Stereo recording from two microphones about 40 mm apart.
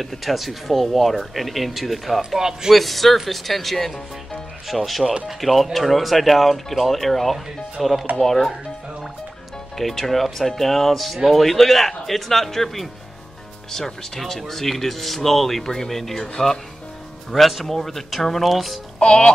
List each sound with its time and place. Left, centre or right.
0.0 s speech: centre
2.3 s speech: centre
2.7 s speech: centre
5.0 s speech: right
5.4 s speech: centre
9.8 s speech: centre
17.3 s speech: centre
18.9 s music: centre